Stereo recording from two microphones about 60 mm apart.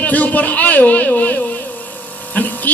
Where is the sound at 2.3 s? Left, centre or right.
Left.